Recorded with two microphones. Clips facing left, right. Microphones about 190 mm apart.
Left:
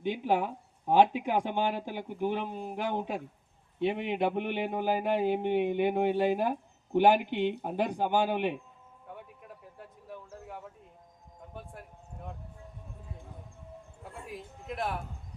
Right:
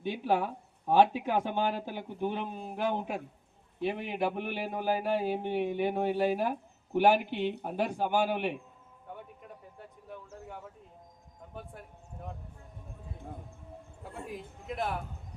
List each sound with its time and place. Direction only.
0.0 s a man's voice: 15° left (ahead or behind)
9.7 s a sound: centre (ahead or behind)
14.0 s a man's voice: centre (ahead or behind)